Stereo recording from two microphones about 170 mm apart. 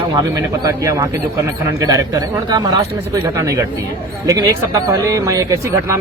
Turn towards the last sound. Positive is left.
turn(degrees=-20)  # may be behind; listen again after turning